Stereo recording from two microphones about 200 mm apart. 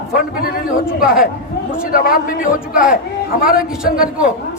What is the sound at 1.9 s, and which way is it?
Speech, 45° left (ahead or behind).